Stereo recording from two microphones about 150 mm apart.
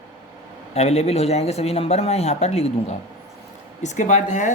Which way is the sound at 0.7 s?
45° left (ahead or behind).